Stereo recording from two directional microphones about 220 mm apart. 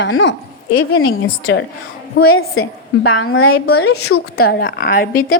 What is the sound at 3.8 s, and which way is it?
Speech, 85° left.